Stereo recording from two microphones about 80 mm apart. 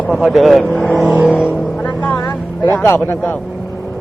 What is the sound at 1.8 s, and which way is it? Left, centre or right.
Vehicle, left.